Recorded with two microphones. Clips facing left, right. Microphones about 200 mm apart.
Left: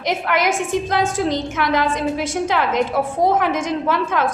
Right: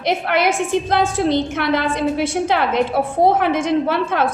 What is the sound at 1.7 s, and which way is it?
A woman's voice, 60° right (ahead or behind).